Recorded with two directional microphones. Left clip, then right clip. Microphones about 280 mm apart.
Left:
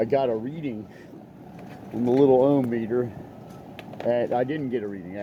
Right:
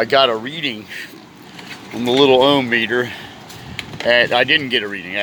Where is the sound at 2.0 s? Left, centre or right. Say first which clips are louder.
Right 6 dB; right.